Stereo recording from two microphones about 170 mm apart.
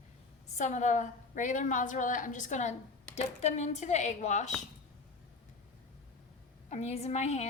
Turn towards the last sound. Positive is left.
turn(degrees=40)  # may be behind; listen again after turning